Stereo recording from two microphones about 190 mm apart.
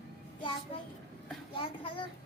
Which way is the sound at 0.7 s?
30° left (ahead or behind).